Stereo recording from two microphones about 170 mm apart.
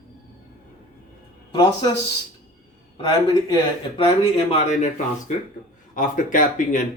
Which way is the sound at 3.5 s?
35° left (ahead or behind).